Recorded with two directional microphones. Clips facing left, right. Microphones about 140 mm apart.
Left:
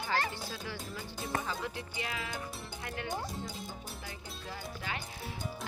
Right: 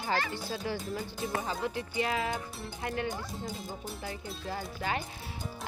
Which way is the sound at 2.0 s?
40° right (ahead or behind).